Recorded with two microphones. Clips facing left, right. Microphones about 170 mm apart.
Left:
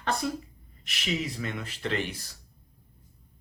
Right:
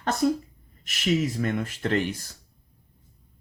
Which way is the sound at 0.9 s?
45° right (ahead or behind).